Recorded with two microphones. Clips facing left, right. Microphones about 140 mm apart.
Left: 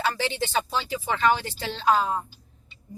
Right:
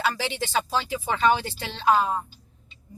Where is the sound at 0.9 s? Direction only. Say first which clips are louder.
Right 1 dB; 15° right (ahead or behind).